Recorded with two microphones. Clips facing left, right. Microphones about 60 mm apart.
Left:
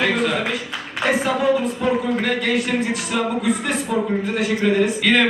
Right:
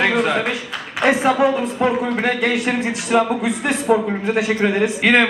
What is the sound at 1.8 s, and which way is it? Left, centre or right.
A man's voice, right.